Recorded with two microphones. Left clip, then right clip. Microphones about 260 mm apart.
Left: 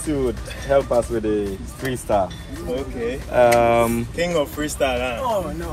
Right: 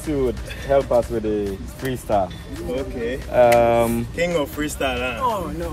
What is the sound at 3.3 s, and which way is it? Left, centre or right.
Speech, left.